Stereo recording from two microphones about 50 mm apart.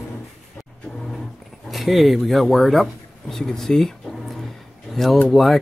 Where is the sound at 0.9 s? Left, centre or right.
Centre.